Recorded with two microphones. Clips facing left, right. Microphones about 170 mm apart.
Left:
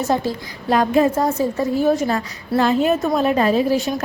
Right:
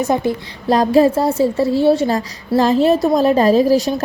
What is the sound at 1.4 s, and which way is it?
A woman's voice, 30° right (ahead or behind).